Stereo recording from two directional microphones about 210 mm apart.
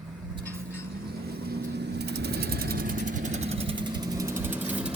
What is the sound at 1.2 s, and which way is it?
Vehicle, 50° right (ahead or behind).